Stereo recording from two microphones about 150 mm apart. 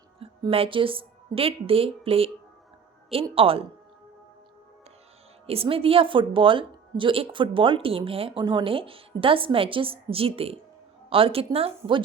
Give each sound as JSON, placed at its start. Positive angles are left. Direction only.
{"t": 0.2, "sound": "a woman's voice", "side_deg": -40}
{"t": 3.3, "sound": "a woman's voice", "side_deg": -35}
{"t": 5.5, "sound": "a woman's voice", "side_deg": -40}